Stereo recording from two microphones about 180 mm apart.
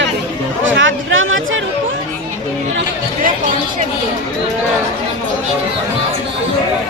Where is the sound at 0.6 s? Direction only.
90° right.